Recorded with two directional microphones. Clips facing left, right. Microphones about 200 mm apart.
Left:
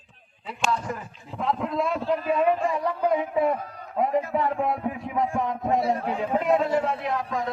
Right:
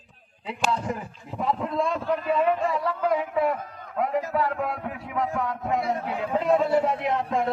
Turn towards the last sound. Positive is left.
turn(degrees=-25)  # may be behind; listen again after turning